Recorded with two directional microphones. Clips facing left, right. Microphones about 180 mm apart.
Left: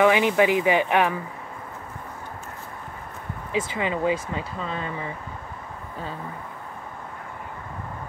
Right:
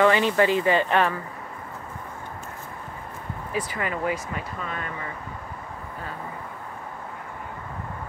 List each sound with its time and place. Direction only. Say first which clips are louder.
0.0 s speech: left 1 dB; 15° left (ahead or behind)
3.8 s speech: left 4 dB; 25° left (ahead or behind)